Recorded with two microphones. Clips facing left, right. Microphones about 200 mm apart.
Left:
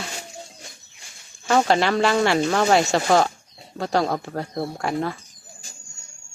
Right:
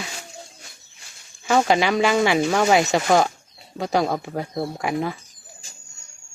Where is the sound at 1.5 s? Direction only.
Centre (ahead or behind).